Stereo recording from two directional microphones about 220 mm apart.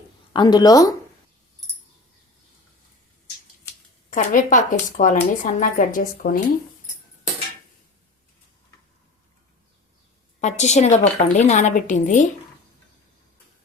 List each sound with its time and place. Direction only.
0.3 s speech: 20° left (ahead or behind)
4.1 s speech: 35° left (ahead or behind)
10.4 s speech: 30° left (ahead or behind)